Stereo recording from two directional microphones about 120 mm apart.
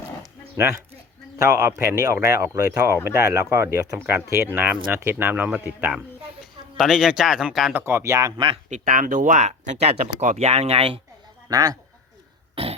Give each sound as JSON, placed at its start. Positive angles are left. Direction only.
{"t": 1.4, "sound": "speech", "side_deg": -25}
{"t": 6.4, "sound": "speech", "side_deg": 0}
{"t": 7.7, "sound": "speech", "side_deg": -20}
{"t": 8.7, "sound": "speech", "side_deg": -90}
{"t": 11.4, "sound": "speech", "side_deg": -30}
{"t": 12.6, "sound": "a sound", "side_deg": -50}